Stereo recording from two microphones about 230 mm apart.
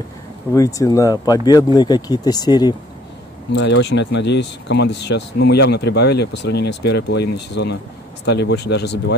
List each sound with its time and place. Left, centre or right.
0.5 s speech: centre
3.5 s speech: left